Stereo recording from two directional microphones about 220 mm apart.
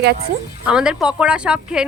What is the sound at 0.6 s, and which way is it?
A woman's voice, 5° right (ahead or behind).